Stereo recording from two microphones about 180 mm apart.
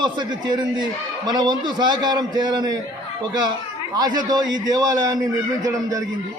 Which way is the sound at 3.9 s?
20° right (ahead or behind).